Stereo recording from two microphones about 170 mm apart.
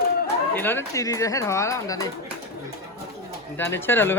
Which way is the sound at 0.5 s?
10° left (ahead or behind).